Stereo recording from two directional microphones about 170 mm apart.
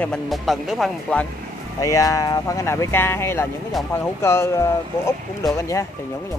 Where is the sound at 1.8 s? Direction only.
20° left (ahead or behind).